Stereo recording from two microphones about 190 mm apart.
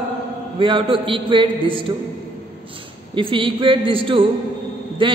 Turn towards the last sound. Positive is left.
turn(degrees=-25)  # may be behind; listen again after turning